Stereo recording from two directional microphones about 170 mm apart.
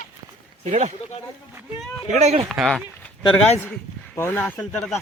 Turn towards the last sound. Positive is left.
turn(degrees=5)  # may be behind; listen again after turning